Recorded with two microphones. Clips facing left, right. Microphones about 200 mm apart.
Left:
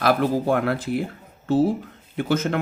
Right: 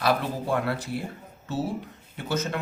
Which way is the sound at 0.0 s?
55° left (ahead or behind).